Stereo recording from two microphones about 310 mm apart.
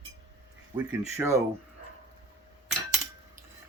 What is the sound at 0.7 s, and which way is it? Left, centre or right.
Speech, centre.